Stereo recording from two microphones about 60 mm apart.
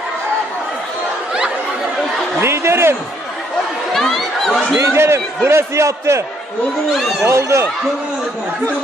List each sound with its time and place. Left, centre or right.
2.4 s a sound: right
3.9 s chatter: centre
4.7 s a sound: right
5.5 s speech: right
6.9 s speech: centre
7.2 s speech: right